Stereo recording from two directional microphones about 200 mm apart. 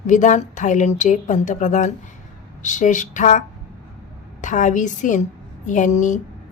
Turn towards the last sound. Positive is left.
turn(degrees=40)  # may be behind; listen again after turning